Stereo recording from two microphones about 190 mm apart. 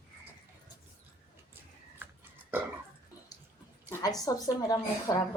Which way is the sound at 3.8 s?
20° left (ahead or behind).